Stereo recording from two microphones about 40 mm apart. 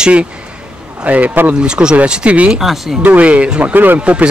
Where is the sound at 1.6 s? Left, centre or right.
Right.